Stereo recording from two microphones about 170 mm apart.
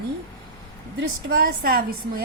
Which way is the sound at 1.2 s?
65° right (ahead or behind).